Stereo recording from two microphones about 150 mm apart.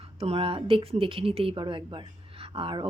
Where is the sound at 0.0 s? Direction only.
40° right (ahead or behind).